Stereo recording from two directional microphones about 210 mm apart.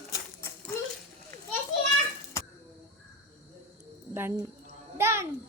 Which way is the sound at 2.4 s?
15° left (ahead or behind).